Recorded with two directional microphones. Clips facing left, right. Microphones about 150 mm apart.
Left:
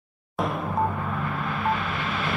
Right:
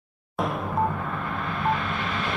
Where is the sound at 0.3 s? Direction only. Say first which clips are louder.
Even; centre (ahead or behind).